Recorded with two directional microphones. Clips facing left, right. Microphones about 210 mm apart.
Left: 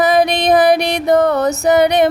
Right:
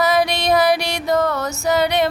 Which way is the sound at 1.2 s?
20° left (ahead or behind).